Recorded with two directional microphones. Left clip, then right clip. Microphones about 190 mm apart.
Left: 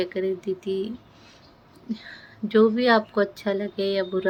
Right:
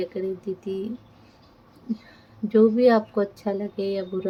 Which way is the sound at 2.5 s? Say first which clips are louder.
Right 1 dB; 10° right (ahead or behind).